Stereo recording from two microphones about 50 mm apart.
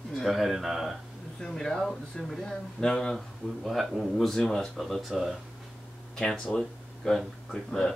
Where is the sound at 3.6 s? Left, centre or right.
Centre.